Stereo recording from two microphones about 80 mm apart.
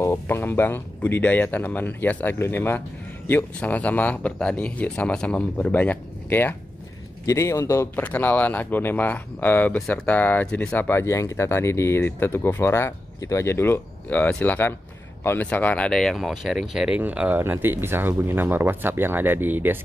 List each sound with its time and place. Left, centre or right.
0.0 s speech: left; by 5.7 s centre
5.7 s speech: left
7.2 s a man's voice: left
7.9 s speech: left
10.9 s speech: left
15.9 s speech: centre
16.9 s speech: centre